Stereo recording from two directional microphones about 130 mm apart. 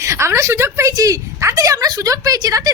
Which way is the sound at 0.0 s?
20° right (ahead or behind).